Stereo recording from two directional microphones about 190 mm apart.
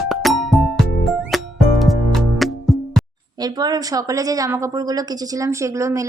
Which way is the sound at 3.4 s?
20° right (ahead or behind).